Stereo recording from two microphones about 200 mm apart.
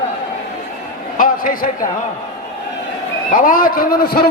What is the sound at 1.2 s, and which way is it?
Speech, 45° left (ahead or behind).